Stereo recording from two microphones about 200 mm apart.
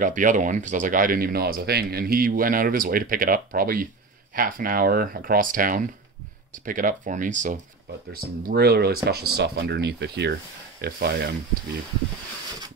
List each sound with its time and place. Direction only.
0.0 s speech: 40° right (ahead or behind)
8.1 s speech: 50° right (ahead or behind)